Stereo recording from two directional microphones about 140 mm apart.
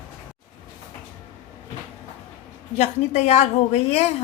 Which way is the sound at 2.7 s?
55° left (ahead or behind).